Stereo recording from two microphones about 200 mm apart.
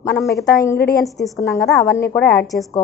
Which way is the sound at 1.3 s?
15° left (ahead or behind).